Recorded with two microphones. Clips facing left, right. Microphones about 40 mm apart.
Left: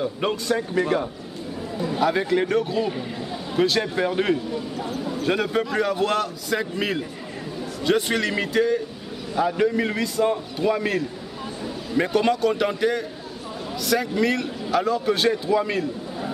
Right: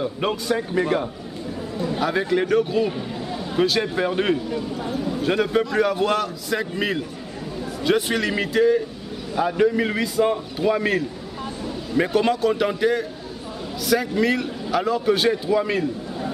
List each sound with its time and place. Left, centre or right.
0.0 s a man's voice: centre